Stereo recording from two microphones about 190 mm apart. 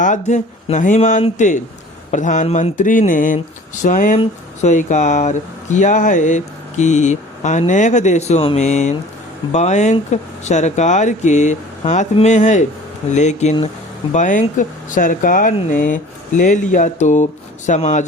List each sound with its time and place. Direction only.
0.0 s speech: 40° left (ahead or behind)